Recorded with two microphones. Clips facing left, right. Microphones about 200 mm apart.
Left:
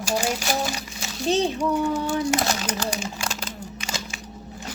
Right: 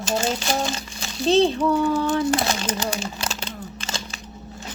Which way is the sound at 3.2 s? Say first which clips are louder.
Right 1 dB; 10° left (ahead or behind).